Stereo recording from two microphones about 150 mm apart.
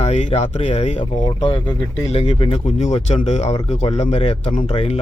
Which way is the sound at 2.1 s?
40° left (ahead or behind).